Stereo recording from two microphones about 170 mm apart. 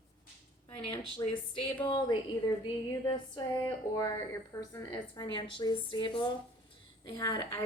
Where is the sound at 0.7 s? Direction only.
30° left (ahead or behind).